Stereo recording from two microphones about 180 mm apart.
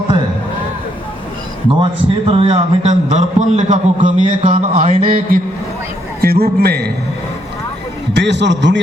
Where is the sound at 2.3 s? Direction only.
30° right (ahead or behind); by 6.9 s 60° right (ahead or behind).